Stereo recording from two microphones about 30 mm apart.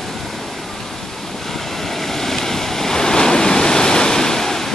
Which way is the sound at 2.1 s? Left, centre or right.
Centre.